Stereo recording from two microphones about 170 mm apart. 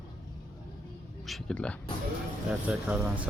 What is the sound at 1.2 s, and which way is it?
Speech, 5° left (ahead or behind).